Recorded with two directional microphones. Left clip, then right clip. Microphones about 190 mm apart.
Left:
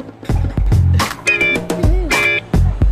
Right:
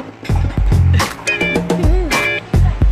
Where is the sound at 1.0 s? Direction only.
Centre (ahead or behind).